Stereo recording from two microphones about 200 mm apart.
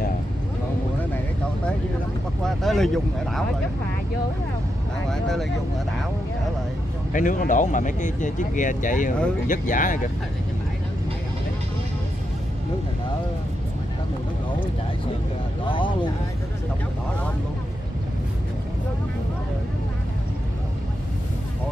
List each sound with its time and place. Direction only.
2.4 s speech: centre (ahead or behind)
5.1 s speech: centre (ahead or behind)
7.1 s speech: 40° left (ahead or behind)
15.6 s speech: 25° left (ahead or behind)